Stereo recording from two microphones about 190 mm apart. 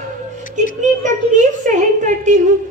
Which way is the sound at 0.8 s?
40° right (ahead or behind).